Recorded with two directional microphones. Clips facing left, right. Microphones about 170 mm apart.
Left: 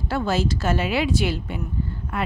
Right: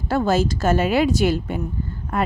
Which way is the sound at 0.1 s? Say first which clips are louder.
Right 4 dB; 45° right (ahead or behind).